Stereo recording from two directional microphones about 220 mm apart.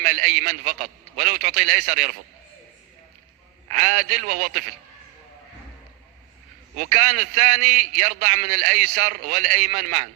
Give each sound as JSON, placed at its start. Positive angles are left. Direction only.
{"t": 0.0, "sound": "a man's voice", "side_deg": -40}
{"t": 3.7, "sound": "a man's voice", "side_deg": -40}
{"t": 6.7, "sound": "a man's voice", "side_deg": -35}